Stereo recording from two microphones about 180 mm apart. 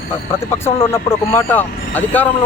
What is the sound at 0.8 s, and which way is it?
Speech, 15° left (ahead or behind).